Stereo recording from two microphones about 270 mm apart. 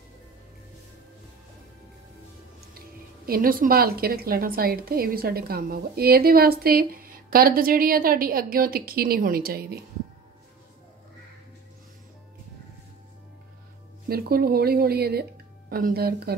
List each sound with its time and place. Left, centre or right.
3.3 s a woman's voice: right
14.0 s a woman's voice: right